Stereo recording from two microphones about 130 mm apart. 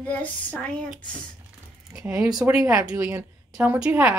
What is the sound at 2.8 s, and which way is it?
A woman's voice, 15° right (ahead or behind).